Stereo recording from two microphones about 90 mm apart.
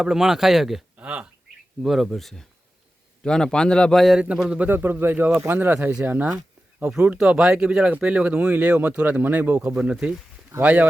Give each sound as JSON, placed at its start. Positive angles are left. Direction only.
{"t": 0.0, "sound": "speech", "side_deg": -5}
{"t": 0.9, "sound": "a sound", "side_deg": -15}
{"t": 1.8, "sound": "a man's voice", "side_deg": 0}
{"t": 4.0, "sound": "speech", "side_deg": -5}